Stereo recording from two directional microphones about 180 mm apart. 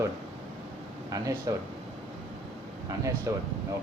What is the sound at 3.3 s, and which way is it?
Speech, 15° right (ahead or behind).